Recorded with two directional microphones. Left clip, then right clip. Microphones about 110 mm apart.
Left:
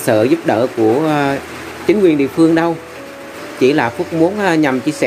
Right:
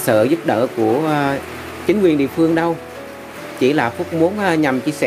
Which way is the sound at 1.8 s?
20° right (ahead or behind).